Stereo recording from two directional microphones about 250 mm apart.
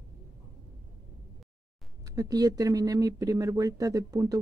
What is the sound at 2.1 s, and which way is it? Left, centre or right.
Speech, centre.